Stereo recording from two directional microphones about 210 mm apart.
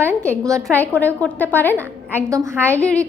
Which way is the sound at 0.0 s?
10° right (ahead or behind).